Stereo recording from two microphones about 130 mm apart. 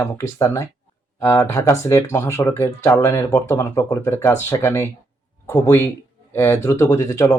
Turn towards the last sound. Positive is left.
turn(degrees=25)  # may be behind; listen again after turning